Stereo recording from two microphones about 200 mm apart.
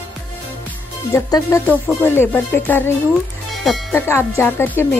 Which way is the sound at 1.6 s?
10° right (ahead or behind).